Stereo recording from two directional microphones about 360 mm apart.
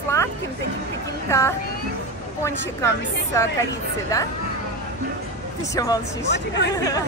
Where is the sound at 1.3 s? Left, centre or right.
Centre.